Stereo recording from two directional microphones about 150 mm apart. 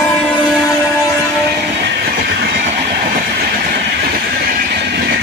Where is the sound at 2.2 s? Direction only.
90° right.